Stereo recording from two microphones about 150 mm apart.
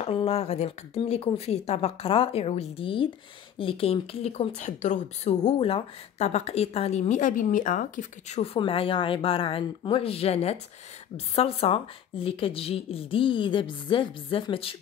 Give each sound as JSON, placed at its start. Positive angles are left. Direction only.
{"t": 0.0, "sound": "a woman's voice", "side_deg": 40}
{"t": 8.5, "sound": "a woman's voice", "side_deg": 35}